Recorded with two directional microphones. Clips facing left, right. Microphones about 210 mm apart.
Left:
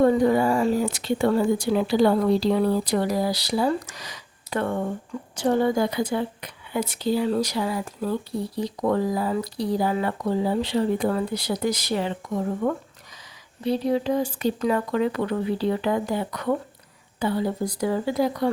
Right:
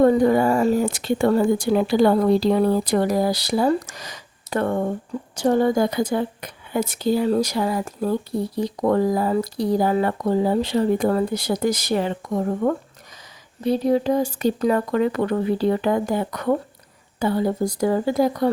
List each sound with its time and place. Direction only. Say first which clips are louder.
0.0 s a woman's voice: right 3 dB; 50° right (ahead or behind)